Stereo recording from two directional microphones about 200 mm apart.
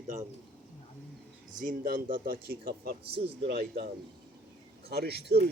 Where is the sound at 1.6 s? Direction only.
45° right (ahead or behind).